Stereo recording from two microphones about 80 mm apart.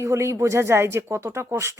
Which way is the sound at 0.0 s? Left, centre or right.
Right.